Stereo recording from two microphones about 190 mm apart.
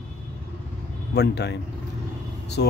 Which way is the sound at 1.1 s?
60° left (ahead or behind).